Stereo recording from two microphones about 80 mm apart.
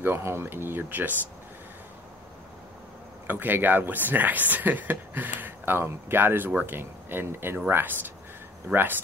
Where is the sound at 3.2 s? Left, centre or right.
Right.